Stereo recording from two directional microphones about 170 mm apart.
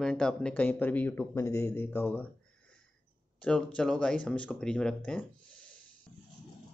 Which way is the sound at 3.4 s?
5° left (ahead or behind).